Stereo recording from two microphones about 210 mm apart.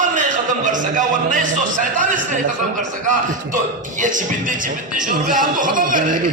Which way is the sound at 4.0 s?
40° right (ahead or behind).